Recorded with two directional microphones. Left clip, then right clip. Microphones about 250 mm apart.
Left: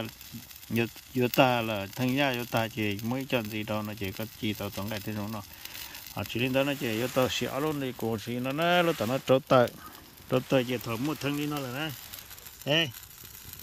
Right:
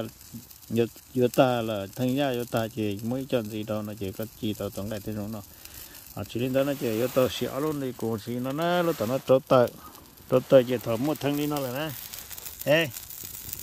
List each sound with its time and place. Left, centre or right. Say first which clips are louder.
0.7 s speech: right 4 dB; centre
4.9 s speech: right 1 dB; centre